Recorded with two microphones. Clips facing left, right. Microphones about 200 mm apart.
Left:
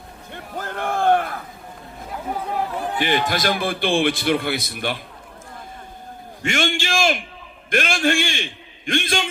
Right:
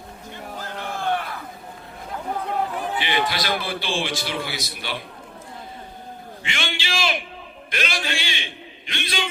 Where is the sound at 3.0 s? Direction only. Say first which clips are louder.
Left 6 dB; 45° left (ahead or behind).